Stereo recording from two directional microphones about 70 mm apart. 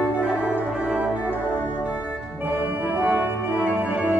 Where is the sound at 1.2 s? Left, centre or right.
Right.